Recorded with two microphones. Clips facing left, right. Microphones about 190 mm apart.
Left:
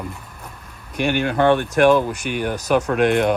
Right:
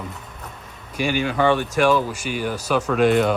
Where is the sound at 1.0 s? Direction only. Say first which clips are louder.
Left 2 dB; 55° left (ahead or behind).